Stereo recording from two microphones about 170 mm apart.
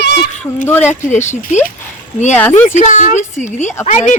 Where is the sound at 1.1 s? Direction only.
45° left (ahead or behind).